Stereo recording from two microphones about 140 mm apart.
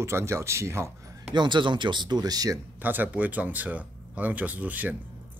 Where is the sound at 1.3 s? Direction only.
35° right (ahead or behind).